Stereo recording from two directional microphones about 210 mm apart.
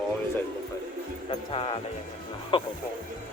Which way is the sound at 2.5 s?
25° left (ahead or behind).